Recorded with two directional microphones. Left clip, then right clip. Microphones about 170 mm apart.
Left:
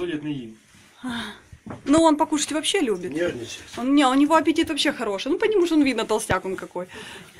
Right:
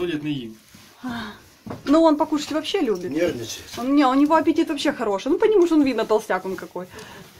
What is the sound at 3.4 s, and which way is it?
Speech, 30° left (ahead or behind).